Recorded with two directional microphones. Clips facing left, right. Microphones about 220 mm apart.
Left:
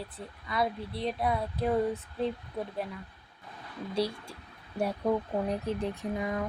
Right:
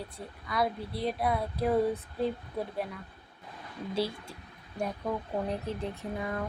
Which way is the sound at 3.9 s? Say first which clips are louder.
Left 1 dB; centre (ahead or behind).